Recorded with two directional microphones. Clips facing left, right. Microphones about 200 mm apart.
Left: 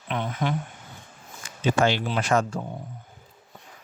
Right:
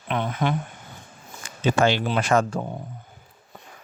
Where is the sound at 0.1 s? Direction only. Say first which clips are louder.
Right 3 dB; 65° right (ahead or behind).